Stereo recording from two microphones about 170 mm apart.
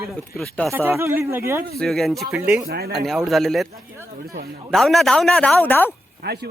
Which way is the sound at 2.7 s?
70° right (ahead or behind).